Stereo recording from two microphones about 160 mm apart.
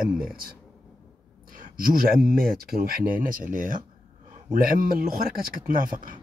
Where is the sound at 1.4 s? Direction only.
60° right (ahead or behind).